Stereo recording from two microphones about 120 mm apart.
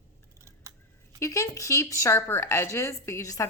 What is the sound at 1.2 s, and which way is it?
Speech, 25° left (ahead or behind).